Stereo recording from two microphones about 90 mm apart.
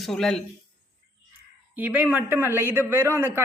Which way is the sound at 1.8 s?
15° right (ahead or behind).